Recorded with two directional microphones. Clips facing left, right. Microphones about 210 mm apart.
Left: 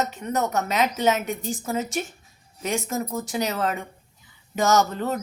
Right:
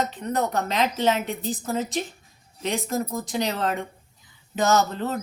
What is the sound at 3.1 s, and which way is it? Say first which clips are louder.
Speech: even; 5° left (ahead or behind).